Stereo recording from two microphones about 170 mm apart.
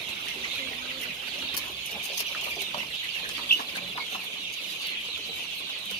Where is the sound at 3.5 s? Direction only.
70° left (ahead or behind).